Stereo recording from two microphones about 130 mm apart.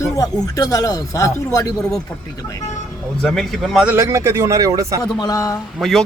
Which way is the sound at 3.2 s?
Centre (ahead or behind).